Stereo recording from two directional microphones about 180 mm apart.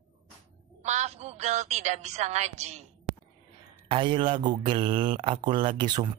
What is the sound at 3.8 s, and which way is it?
Speech, 30° right (ahead or behind).